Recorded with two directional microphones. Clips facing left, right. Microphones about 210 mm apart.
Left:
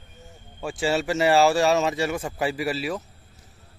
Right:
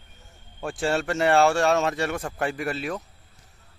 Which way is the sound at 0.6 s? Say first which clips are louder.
Left 1 dB; centre (ahead or behind).